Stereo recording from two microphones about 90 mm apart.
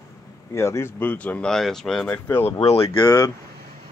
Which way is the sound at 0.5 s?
30° left (ahead or behind).